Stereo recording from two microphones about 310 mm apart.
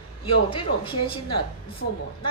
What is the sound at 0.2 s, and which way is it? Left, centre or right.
Speech, centre.